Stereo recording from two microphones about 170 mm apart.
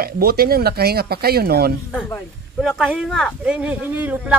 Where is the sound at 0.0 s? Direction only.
65° right (ahead or behind).